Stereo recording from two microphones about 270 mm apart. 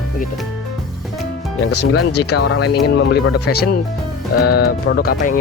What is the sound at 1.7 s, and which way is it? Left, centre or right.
Speech, left.